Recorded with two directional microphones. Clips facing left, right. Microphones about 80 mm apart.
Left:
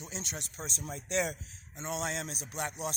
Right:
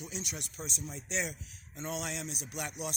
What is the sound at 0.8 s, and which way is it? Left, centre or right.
Speech, left.